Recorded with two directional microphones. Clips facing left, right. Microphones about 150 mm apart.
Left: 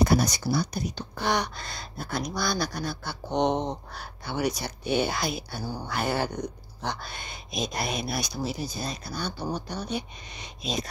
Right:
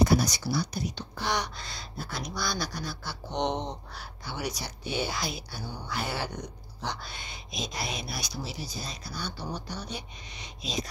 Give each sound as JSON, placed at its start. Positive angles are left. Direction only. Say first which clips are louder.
{"t": 0.0, "sound": "speech", "louder": "left 1 dB", "side_deg": 55}